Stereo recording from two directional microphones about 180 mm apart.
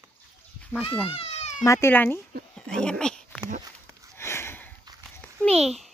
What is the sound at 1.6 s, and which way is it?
Speech, 15° left (ahead or behind).